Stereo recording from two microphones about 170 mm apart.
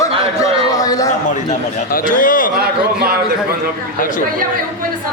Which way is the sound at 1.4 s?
55° left (ahead or behind).